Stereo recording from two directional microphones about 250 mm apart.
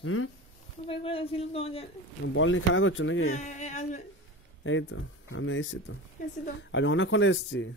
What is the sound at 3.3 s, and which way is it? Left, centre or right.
Speech, left.